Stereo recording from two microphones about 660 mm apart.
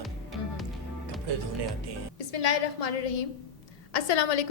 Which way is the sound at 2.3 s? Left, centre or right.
Left.